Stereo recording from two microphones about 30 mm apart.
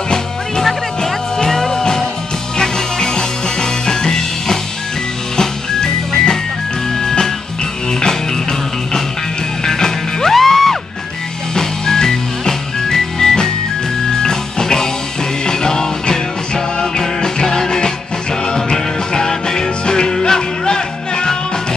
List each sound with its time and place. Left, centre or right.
1.0 s music: centre